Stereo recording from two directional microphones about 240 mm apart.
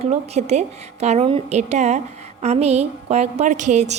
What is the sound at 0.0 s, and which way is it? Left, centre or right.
A woman's voice, right.